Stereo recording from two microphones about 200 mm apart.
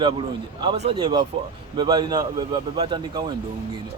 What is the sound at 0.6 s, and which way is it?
A man's voice, 25° right (ahead or behind).